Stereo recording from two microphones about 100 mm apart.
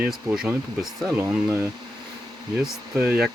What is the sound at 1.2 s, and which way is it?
Speech, 25° right (ahead or behind).